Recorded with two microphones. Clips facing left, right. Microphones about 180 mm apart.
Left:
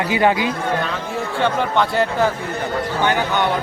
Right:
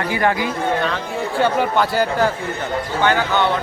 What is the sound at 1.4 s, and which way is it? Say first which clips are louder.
Speech: right 1 dB; 5° right (ahead or behind).